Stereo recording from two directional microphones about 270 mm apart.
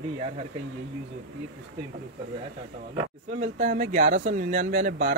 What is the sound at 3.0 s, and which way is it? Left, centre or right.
Speech, right.